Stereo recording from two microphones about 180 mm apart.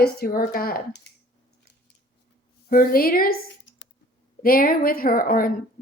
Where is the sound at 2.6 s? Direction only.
55° left (ahead or behind).